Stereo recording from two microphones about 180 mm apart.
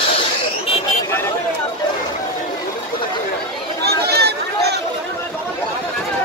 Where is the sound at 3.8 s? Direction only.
65° right (ahead or behind).